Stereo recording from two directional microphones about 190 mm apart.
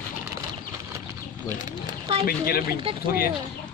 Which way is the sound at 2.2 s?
50° left (ahead or behind).